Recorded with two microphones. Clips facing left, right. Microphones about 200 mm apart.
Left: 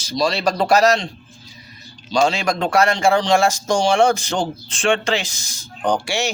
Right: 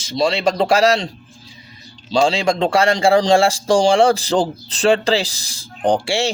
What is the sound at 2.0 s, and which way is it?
Speech, 30° right (ahead or behind).